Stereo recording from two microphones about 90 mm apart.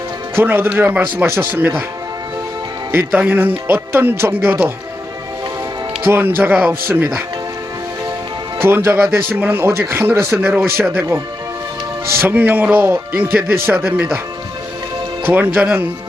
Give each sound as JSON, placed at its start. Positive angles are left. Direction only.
{"t": 0.3, "sound": "speech", "side_deg": -25}
{"t": 3.1, "sound": "speech", "side_deg": -20}
{"t": 6.1, "sound": "speech", "side_deg": -25}
{"t": 8.6, "sound": "speech", "side_deg": -25}
{"t": 12.3, "sound": "speech", "side_deg": -20}
{"t": 15.3, "sound": "speech", "side_deg": -20}